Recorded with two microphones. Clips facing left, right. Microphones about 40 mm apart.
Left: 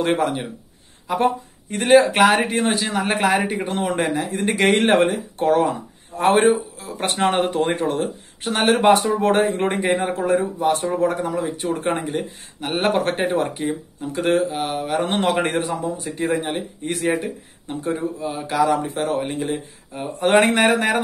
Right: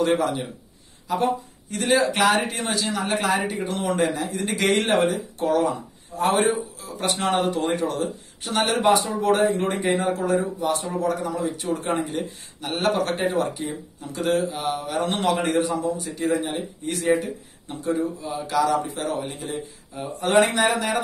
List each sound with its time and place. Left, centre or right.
0.0 s speech: left
1.0 s a sound: left
1.8 s a man's voice: left
12.1 s a man's voice: left
17.2 s speech: left